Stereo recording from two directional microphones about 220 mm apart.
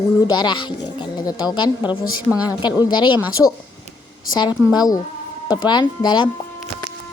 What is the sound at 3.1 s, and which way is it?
Speech, 5° right (ahead or behind).